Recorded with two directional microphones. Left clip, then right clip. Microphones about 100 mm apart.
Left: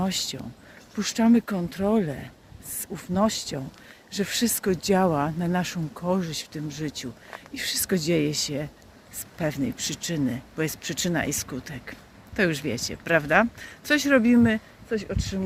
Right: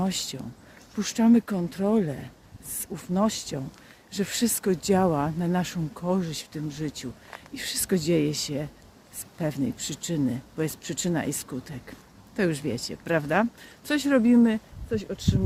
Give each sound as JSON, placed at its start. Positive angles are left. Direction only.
{"t": 0.0, "sound": "speech", "side_deg": -40}